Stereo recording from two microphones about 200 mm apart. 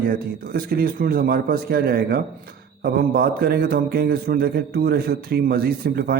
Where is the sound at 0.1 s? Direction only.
50° right (ahead or behind).